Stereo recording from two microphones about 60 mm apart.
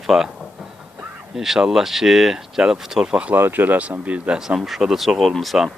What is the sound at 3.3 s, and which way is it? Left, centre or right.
Speech, right.